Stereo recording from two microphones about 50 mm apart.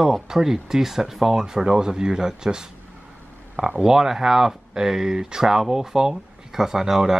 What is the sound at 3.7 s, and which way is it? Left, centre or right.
Speech, centre.